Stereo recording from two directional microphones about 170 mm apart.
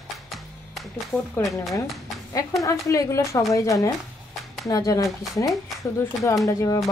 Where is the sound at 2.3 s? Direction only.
20° left (ahead or behind).